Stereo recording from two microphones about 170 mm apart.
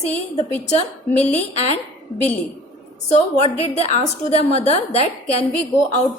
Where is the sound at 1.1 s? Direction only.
10° left (ahead or behind).